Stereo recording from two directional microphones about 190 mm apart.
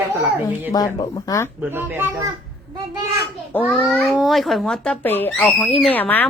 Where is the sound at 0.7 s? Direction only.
20° left (ahead or behind).